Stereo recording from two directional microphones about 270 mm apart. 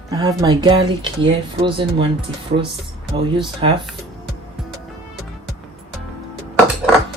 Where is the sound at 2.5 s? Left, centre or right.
Right.